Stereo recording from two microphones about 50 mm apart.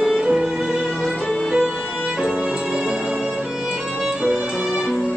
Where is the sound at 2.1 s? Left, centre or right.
Centre.